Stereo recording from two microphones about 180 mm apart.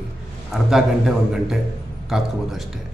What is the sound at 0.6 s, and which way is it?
A man's voice, centre (ahead or behind).